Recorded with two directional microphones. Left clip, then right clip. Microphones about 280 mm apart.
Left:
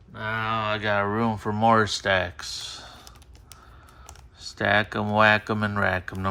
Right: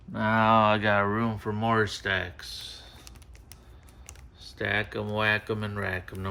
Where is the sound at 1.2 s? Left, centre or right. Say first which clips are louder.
Left 6 dB; centre.